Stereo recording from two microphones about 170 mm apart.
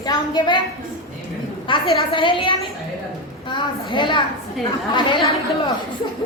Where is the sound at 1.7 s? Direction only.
30° left (ahead or behind).